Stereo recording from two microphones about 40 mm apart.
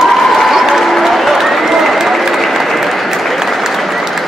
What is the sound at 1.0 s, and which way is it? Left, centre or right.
Applause, centre.